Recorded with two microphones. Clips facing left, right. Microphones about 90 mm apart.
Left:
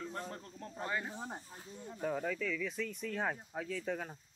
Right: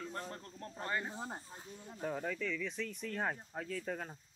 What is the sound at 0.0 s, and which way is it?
Speech, centre (ahead or behind).